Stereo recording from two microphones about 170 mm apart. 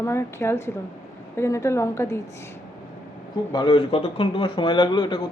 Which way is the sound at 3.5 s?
25° left (ahead or behind).